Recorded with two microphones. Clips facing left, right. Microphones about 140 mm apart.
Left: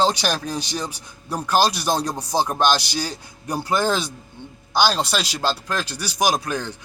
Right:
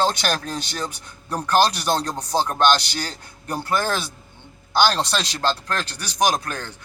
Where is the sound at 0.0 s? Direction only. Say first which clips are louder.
Left 1 dB; 15° left (ahead or behind).